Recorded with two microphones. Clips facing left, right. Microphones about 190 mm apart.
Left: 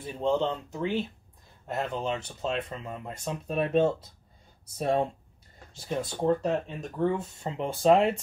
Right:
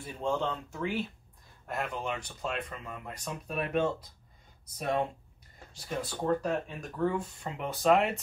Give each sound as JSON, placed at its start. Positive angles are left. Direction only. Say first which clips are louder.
{"t": 0.0, "sound": "speech", "louder": "left 5 dB", "side_deg": 20}